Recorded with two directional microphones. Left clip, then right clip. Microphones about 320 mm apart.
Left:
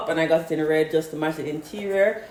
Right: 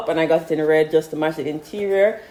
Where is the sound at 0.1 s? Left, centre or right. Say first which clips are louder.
Right 3 dB; right.